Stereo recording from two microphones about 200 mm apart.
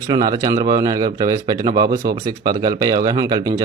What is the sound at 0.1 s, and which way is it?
A man's voice, 20° right (ahead or behind).